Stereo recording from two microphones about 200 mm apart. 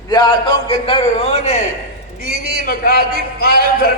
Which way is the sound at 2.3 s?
55° right (ahead or behind).